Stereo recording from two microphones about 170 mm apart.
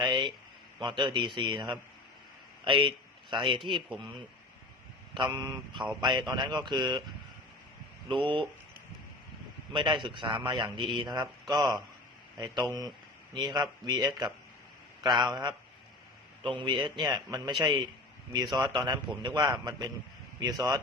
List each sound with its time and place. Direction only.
0.0 s a man's voice: 25° right (ahead or behind)
3.8 s speech: centre (ahead or behind)
5.1 s a man's voice: 25° right (ahead or behind)
8.0 s speech: 30° right (ahead or behind)
9.7 s a man's voice: 30° right (ahead or behind)
13.3 s a man's voice: 25° right (ahead or behind)